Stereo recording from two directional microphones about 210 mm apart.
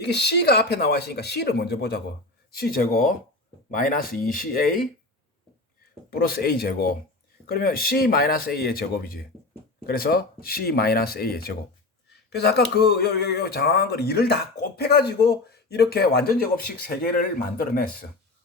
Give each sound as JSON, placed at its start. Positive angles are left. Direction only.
{"t": 0.0, "sound": "speech", "side_deg": 50}
{"t": 6.1, "sound": "speech", "side_deg": 45}